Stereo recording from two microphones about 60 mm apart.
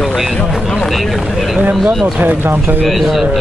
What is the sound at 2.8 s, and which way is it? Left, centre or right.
Speech, centre.